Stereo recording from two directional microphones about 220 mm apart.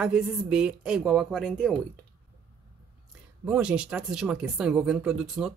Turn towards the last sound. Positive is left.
turn(degrees=0)  # may be behind; listen again after turning